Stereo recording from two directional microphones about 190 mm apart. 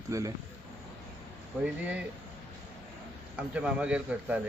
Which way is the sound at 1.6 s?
5° right (ahead or behind).